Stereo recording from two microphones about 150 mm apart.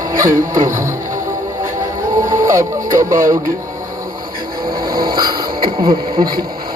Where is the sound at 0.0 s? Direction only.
20° right (ahead or behind).